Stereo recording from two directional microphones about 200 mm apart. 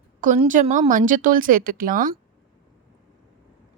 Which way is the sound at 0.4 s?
40° right (ahead or behind).